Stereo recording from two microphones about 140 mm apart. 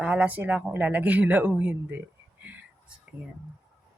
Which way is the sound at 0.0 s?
10° right (ahead or behind).